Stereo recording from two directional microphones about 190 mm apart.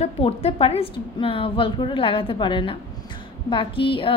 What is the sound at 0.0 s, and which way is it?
A woman's voice, 30° left (ahead or behind).